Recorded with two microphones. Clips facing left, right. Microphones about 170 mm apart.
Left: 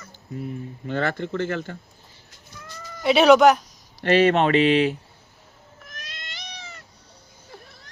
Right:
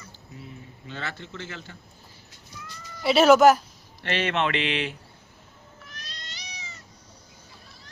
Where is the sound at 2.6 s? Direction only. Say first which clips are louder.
Left 4 dB; 50° left (ahead or behind).